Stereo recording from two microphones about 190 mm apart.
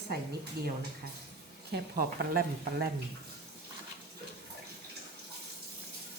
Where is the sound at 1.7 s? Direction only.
55° right (ahead or behind).